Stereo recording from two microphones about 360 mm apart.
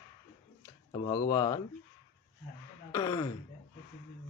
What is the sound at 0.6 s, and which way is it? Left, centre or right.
Speech, centre.